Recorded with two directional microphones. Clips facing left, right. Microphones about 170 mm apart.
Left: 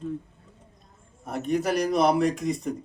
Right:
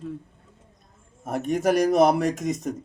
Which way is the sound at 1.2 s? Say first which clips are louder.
Right 3 dB; 50° right (ahead or behind).